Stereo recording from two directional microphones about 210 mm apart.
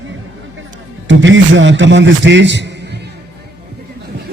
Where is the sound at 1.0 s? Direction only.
60° right (ahead or behind).